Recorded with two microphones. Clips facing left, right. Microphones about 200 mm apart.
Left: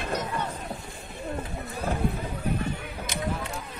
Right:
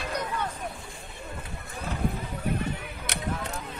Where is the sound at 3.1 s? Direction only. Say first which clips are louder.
Left 3 dB; 70° right (ahead or behind).